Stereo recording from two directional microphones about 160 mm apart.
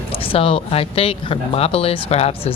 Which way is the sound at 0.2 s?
35° left (ahead or behind).